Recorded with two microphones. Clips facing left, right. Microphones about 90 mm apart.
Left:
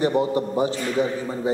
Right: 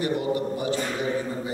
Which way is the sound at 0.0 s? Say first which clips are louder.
Left 4 dB; 30° left (ahead or behind).